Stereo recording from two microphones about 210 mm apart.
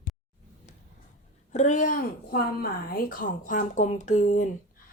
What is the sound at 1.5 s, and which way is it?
A woman's voice, 35° left (ahead or behind).